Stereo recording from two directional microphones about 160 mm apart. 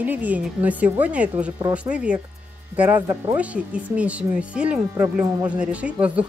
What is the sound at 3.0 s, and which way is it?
Speech, 20° right (ahead or behind).